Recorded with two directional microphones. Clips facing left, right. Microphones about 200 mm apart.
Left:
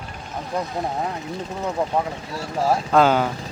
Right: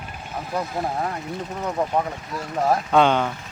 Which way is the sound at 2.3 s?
30° left (ahead or behind).